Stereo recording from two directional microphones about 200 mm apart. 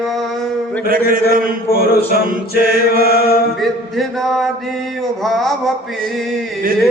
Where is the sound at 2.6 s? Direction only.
45° right (ahead or behind).